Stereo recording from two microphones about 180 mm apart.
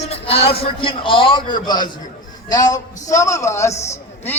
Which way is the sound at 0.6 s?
30° left (ahead or behind).